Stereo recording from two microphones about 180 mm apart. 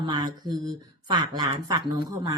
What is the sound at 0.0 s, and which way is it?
A woman's voice, 25° right (ahead or behind).